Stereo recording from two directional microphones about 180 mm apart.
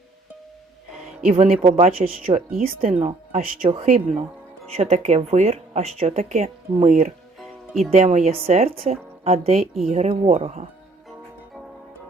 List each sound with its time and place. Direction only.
1.2 s speech: 35° right (ahead or behind)
2.2 s speech: 50° right (ahead or behind)
2.9 s speech: 35° right (ahead or behind)
7.3 s music: centre (ahead or behind)
7.9 s speech: 40° right (ahead or behind)